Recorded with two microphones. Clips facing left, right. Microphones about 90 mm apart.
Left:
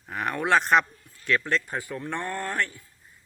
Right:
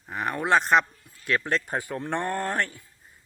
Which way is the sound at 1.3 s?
25° right (ahead or behind).